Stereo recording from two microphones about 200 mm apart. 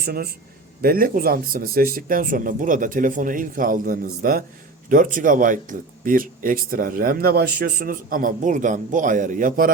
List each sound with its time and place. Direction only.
0.0 s a man's voice: 50° right (ahead or behind)